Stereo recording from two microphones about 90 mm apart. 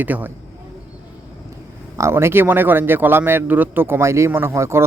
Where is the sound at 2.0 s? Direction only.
30° right (ahead or behind).